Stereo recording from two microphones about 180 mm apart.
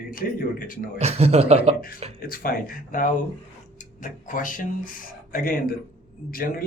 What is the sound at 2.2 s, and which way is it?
Speech, 55° left (ahead or behind).